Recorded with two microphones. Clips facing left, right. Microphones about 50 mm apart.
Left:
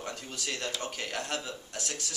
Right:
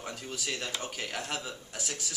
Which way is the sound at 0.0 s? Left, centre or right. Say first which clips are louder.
Even; centre.